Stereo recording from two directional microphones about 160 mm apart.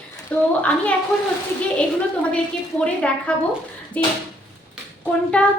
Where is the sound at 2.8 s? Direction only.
10° left (ahead or behind).